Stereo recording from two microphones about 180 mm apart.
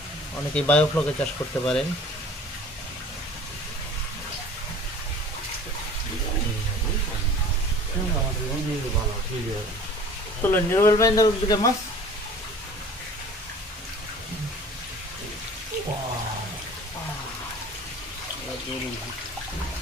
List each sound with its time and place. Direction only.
0.5 s speech: 5° left (ahead or behind)
10.4 s speech: 15° left (ahead or behind)